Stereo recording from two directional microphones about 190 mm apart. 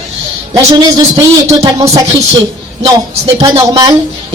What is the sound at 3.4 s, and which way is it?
Music, 20° right (ahead or behind).